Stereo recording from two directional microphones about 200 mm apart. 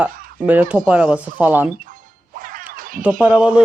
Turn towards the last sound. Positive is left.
turn(degrees=-5)  # may be behind; listen again after turning